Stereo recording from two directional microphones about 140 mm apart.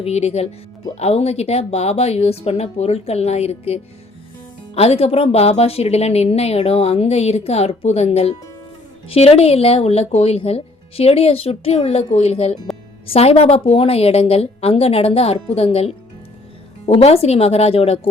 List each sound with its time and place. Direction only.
0.0 s speech: 50° left (ahead or behind)